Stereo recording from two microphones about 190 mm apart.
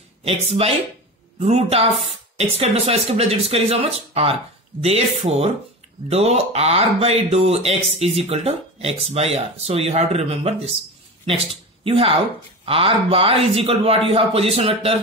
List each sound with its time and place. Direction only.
0.2 s speech: 30° right (ahead or behind)